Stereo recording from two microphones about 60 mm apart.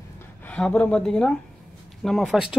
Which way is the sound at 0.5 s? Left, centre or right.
Centre.